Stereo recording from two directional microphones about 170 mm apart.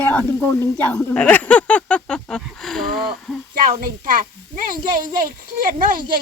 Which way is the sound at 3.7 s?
55° right (ahead or behind).